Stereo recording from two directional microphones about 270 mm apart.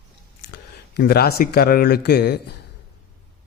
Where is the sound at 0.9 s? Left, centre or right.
Left.